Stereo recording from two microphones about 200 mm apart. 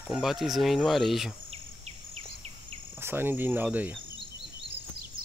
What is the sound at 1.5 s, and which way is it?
Insect, 30° right (ahead or behind).